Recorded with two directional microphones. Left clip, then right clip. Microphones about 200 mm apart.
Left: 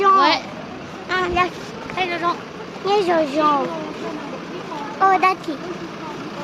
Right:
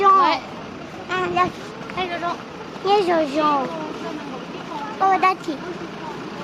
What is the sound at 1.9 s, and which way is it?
Speech, 35° left (ahead or behind).